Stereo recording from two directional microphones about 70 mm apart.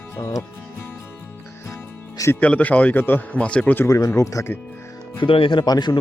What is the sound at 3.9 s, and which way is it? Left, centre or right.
Speech, left.